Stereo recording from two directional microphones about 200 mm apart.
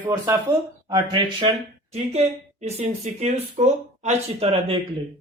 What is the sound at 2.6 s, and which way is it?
Speech, 30° right (ahead or behind).